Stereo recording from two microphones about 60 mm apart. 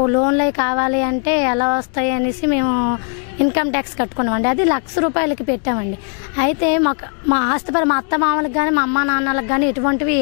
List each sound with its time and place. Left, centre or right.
0.0 s speech: left